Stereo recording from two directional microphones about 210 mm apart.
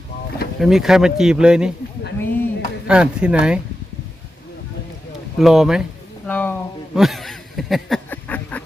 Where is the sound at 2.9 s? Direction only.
5° right (ahead or behind).